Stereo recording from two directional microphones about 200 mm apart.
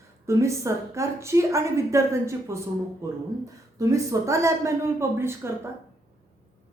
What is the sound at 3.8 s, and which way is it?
Speech, 15° right (ahead or behind).